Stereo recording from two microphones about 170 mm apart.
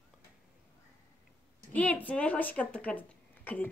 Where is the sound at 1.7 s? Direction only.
10° left (ahead or behind).